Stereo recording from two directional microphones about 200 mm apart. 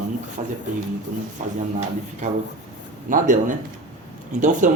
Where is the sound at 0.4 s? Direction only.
35° right (ahead or behind).